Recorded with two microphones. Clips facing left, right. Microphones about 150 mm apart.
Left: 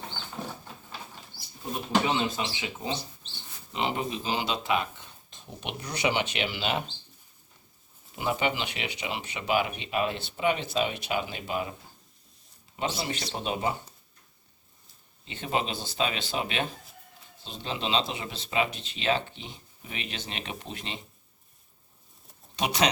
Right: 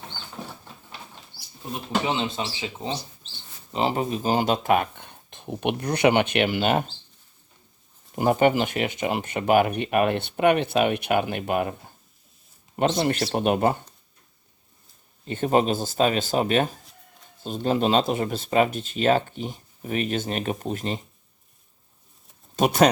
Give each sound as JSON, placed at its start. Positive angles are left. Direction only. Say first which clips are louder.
{"t": 2.0, "sound": "speech", "louder": "right 2 dB", "side_deg": -25}
{"t": 8.1, "sound": "speech", "louder": "right 9 dB", "side_deg": -50}
{"t": 12.8, "sound": "speech", "louder": "right 9 dB", "side_deg": -50}
{"t": 15.2, "sound": "speech", "louder": "right 9 dB", "side_deg": -50}
{"t": 22.5, "sound": "speech", "louder": "right 8 dB", "side_deg": -50}